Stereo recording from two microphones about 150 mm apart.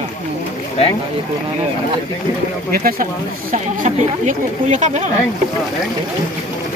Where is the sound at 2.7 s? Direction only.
75° right (ahead or behind).